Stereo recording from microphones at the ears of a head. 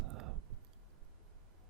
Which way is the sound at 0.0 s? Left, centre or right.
Right.